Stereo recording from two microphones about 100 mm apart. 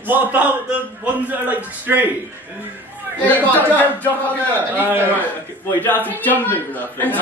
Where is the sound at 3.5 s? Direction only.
15° left (ahead or behind).